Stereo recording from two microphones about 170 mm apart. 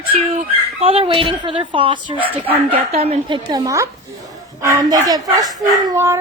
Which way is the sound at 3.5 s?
20° right (ahead or behind).